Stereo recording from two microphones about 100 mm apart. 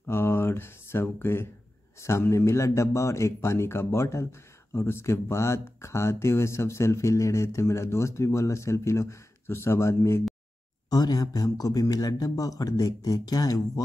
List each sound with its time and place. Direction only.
0.0 s a man's voice: 25° left (ahead or behind)
10.9 s speech: 40° left (ahead or behind)